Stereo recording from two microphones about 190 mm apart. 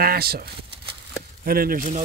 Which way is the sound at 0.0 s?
55° right (ahead or behind).